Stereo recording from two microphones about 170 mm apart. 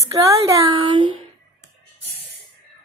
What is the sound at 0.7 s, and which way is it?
Speech, 30° right (ahead or behind).